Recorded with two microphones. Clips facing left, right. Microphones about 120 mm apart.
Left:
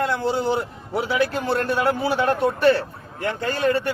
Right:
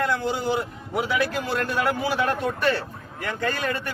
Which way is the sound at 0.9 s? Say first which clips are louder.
Left 2 dB; 30° left (ahead or behind).